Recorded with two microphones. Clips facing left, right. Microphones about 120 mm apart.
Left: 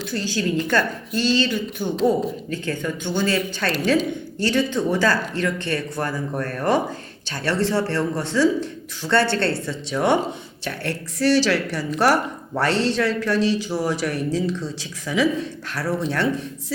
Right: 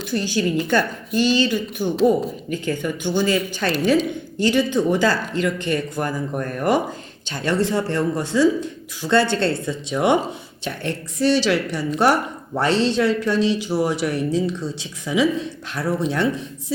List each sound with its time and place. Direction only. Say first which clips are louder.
0.0 s a woman's voice: right 3 dB; 20° right (ahead or behind)